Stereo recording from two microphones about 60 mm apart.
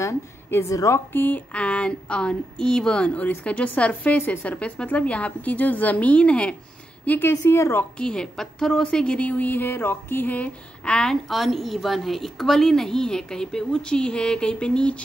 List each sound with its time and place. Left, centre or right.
0.7 s a woman's voice: left
1.1 s speech: left
1.5 s a woman's voice: centre
7.1 s a woman's voice: left
8.0 s a woman's voice: centre
11.2 s a woman's voice: centre